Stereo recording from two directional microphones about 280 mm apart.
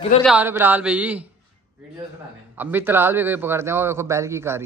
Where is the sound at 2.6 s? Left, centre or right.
Centre.